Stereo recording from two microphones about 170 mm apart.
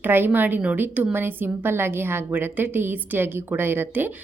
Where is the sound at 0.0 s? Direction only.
10° right (ahead or behind).